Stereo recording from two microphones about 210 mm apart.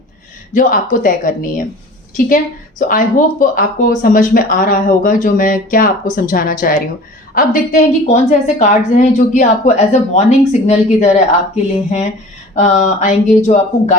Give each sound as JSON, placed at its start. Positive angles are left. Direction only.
{"t": 0.5, "sound": "a woman's voice", "side_deg": 40}
{"t": 12.5, "sound": "a woman's voice", "side_deg": 35}